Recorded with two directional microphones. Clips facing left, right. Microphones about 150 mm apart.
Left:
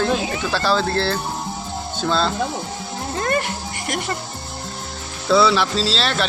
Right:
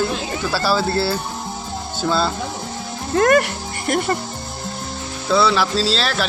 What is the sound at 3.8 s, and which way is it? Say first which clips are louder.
Speech: right 6 dB; 45° right (ahead or behind).